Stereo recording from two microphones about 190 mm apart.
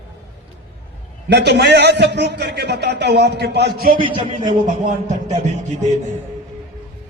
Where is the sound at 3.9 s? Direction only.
25° right (ahead or behind).